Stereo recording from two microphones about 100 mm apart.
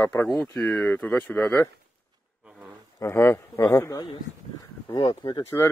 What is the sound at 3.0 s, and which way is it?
Speech, 25° left (ahead or behind).